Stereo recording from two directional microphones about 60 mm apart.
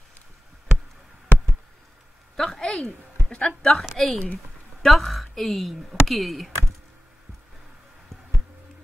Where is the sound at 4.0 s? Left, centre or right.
Centre.